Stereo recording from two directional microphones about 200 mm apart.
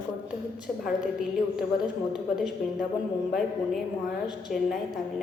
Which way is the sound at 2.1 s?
Centre (ahead or behind).